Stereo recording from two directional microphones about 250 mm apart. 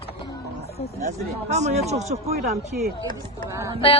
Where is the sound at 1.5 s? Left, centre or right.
Right.